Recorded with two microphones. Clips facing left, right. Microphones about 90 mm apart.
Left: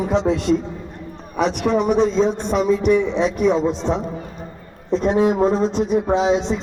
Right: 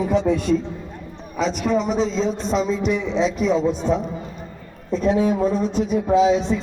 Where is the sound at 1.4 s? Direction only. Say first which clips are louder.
Left 2 dB; 65° left (ahead or behind); by 4.0 s 85° left.